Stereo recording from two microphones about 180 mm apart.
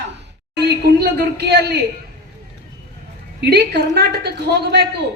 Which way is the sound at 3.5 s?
65° right (ahead or behind).